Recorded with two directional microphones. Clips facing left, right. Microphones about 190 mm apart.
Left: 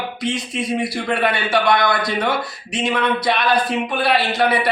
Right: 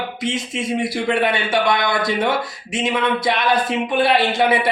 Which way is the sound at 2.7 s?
20° right (ahead or behind).